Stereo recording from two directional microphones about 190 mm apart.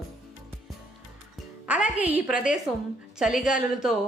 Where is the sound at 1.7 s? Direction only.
5° right (ahead or behind).